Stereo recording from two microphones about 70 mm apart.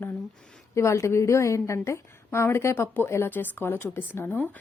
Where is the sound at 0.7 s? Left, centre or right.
Left.